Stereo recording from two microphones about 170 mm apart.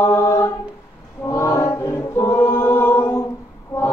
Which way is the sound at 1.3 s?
15° left (ahead or behind).